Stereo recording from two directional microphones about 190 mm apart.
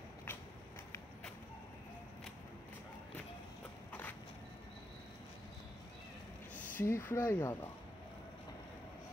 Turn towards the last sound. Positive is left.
turn(degrees=10)  # may be behind; listen again after turning